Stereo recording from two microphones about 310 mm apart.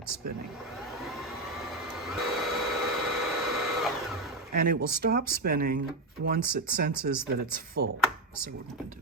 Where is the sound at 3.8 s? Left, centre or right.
Centre.